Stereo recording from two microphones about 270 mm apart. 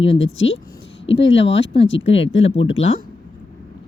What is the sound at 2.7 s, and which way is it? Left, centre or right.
Speech, left.